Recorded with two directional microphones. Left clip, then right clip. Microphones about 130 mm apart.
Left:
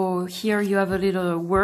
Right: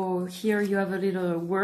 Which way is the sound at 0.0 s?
40° left (ahead or behind).